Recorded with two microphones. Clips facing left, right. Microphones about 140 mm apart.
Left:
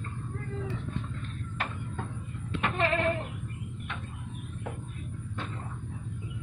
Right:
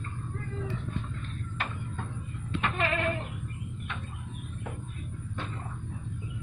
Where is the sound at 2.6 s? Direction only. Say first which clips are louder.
Left 2 dB; 30° left (ahead or behind).